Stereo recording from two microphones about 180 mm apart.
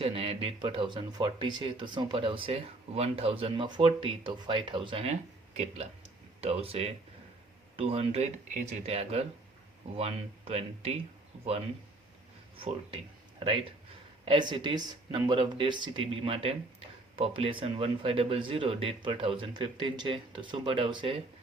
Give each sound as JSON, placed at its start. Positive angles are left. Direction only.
{"t": 0.0, "sound": "speech", "side_deg": -30}
{"t": 12.5, "sound": "speech", "side_deg": -30}
{"t": 14.3, "sound": "speech", "side_deg": -25}